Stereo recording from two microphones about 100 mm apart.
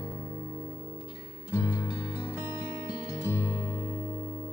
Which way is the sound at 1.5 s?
25° left (ahead or behind).